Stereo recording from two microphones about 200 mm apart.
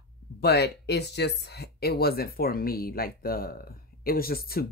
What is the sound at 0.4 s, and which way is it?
Speech, 55° left (ahead or behind).